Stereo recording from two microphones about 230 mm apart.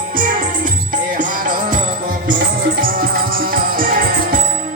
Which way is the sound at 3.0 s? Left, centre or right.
Right.